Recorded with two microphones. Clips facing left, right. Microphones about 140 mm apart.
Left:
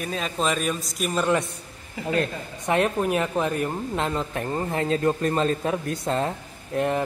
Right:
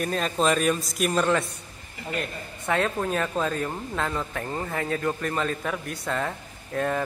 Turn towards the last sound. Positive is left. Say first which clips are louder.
# left 3 dB
turn(degrees=20)  # may be behind; listen again after turning